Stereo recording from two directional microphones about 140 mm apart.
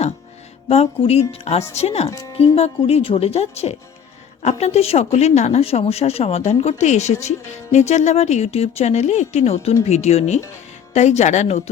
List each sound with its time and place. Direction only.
0.7 s speech: 45° left (ahead or behind)
2.0 s speech: 20° left (ahead or behind)
2.4 s speech: 45° left (ahead or behind)